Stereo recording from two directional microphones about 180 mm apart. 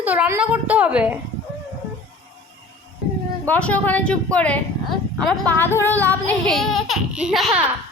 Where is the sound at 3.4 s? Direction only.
10° left (ahead or behind).